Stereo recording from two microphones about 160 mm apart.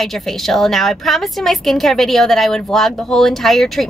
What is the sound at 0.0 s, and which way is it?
A woman's voice, centre (ahead or behind).